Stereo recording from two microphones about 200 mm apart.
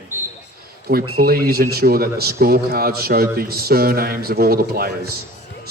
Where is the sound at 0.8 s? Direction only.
50° right (ahead or behind).